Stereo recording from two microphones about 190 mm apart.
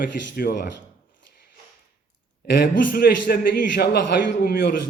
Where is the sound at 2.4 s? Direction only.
60° left (ahead or behind).